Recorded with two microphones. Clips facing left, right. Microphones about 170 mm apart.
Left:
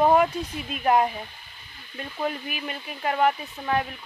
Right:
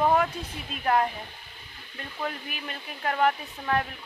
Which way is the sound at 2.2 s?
10° left (ahead or behind).